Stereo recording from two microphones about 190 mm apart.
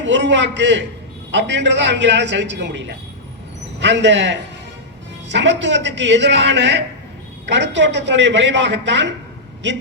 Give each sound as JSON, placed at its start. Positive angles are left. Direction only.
{"t": 0.0, "sound": "a man's voice", "side_deg": -70}